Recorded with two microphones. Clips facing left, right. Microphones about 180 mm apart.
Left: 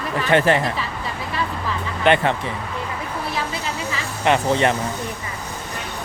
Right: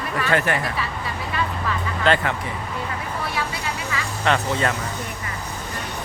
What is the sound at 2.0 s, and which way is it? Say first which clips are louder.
Speech: left 4 dB; 25° left (ahead or behind).